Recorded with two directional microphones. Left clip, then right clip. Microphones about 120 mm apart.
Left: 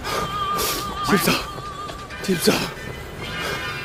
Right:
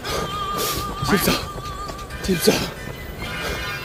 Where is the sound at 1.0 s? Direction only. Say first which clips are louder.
Left 1 dB; 10° left (ahead or behind).